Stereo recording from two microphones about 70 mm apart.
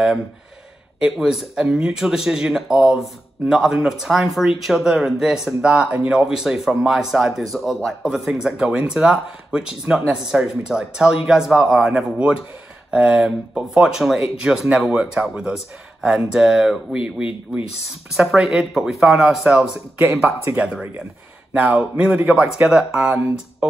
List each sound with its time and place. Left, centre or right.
1.0 s speech: centre
21.5 s a man's voice: centre